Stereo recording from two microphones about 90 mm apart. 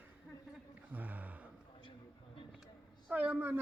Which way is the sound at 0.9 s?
20° right (ahead or behind).